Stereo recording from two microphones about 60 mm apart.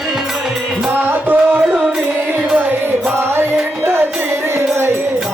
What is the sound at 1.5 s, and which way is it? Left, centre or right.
Music, centre.